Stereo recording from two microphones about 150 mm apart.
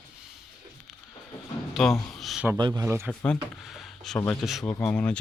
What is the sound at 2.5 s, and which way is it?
Speech, 30° right (ahead or behind).